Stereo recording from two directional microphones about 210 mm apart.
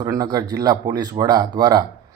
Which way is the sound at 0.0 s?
15° right (ahead or behind).